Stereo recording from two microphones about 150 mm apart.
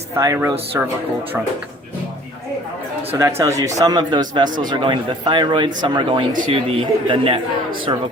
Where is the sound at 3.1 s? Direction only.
20° right (ahead or behind).